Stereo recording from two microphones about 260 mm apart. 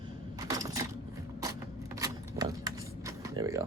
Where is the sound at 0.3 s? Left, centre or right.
Centre.